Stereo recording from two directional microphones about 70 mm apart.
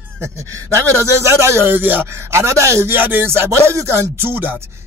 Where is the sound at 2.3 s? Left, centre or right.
Right.